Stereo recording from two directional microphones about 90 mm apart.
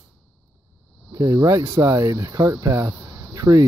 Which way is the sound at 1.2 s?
40° right (ahead or behind).